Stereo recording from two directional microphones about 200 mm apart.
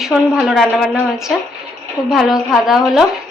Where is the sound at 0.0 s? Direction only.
Centre (ahead or behind).